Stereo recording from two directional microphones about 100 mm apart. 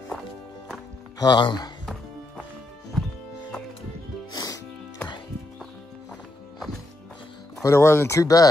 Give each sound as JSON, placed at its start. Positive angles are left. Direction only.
{"t": 1.2, "sound": "speech", "side_deg": 45}
{"t": 4.3, "sound": "music", "side_deg": 40}
{"t": 7.6, "sound": "speech", "side_deg": 25}